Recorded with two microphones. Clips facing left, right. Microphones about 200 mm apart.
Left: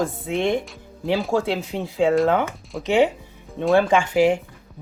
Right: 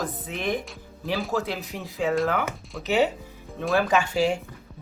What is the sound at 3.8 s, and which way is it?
Speech, 25° left (ahead or behind).